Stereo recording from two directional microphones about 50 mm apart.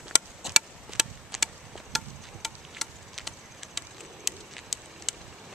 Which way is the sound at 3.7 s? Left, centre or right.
Centre.